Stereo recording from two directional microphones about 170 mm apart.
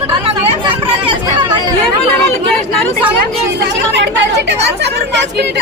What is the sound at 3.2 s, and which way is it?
Speech, 80° right.